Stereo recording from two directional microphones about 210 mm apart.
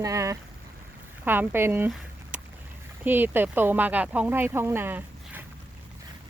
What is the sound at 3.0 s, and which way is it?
Speech, 10° right (ahead or behind).